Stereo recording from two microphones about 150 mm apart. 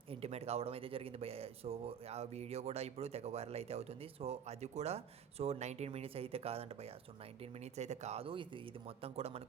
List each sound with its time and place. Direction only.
0.1 s speech: 45° right (ahead or behind)